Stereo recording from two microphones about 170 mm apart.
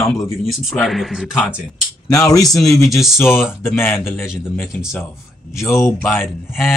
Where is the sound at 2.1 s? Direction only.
20° left (ahead or behind).